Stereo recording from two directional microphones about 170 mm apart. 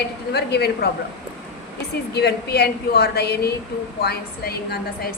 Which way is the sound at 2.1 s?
70° left (ahead or behind).